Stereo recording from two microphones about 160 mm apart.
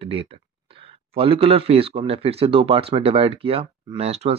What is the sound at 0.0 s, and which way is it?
Speech, 35° right (ahead or behind).